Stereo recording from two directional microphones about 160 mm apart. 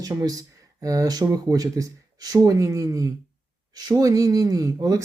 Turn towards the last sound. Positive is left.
turn(degrees=-20)  # may be behind; listen again after turning